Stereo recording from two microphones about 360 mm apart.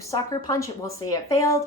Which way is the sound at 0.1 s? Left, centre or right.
Centre.